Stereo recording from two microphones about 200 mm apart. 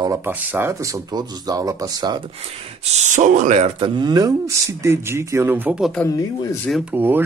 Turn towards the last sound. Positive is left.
turn(degrees=-10)  # may be behind; listen again after turning